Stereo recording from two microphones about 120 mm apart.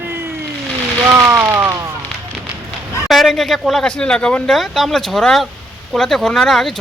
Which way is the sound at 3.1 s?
Centre (ahead or behind).